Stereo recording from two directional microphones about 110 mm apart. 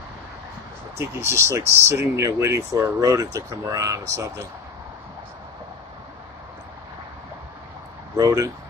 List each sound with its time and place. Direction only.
0.9 s speech: 25° right (ahead or behind)
8.2 s speech: 35° right (ahead or behind)